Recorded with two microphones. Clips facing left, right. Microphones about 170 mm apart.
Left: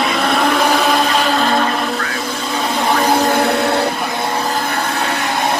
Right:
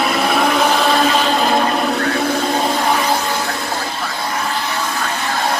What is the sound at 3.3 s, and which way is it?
Vehicle, 65° left (ahead or behind).